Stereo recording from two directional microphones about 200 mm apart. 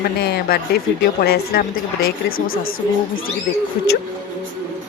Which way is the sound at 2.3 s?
90° left.